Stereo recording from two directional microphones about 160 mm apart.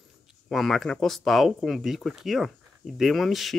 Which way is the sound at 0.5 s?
Centre (ahead or behind).